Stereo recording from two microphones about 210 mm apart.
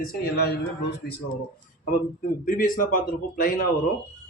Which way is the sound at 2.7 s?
40° left (ahead or behind).